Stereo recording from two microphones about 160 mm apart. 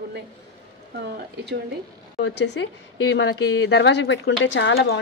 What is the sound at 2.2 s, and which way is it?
Speech, 90° left.